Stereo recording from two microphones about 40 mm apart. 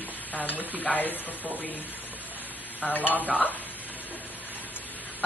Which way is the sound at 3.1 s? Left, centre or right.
Left.